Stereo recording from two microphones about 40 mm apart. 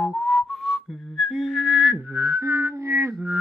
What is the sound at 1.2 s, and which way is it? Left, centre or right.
Whistling, centre.